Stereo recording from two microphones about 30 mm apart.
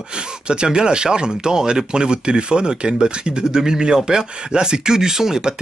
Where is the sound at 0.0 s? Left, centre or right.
Right.